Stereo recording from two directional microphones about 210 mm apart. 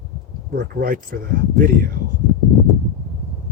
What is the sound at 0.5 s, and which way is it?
Speech, 45° right (ahead or behind).